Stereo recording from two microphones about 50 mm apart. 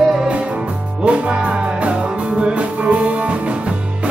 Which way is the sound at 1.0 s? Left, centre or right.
Right.